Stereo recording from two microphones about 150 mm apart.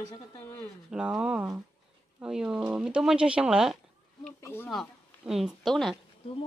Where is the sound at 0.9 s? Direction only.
5° right (ahead or behind).